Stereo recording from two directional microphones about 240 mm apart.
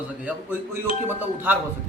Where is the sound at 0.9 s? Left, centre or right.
Left.